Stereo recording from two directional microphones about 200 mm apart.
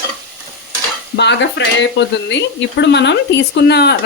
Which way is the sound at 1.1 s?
60° left (ahead or behind).